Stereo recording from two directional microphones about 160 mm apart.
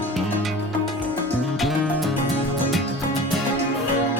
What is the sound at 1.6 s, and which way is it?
Music, centre (ahead or behind).